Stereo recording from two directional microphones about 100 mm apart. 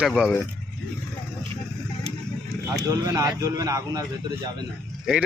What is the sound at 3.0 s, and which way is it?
A man's voice, 35° right (ahead or behind).